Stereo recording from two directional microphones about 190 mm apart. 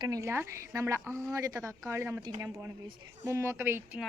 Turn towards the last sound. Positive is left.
turn(degrees=-10)  # may be behind; listen again after turning